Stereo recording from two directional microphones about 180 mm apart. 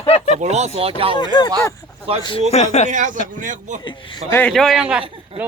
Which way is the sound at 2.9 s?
45° right (ahead or behind).